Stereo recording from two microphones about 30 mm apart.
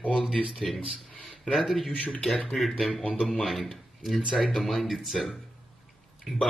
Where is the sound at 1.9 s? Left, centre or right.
Left.